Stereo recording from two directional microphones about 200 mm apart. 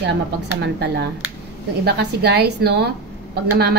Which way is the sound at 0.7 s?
55° right (ahead or behind).